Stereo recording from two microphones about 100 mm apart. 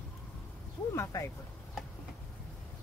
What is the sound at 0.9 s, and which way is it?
Speech, 30° left (ahead or behind).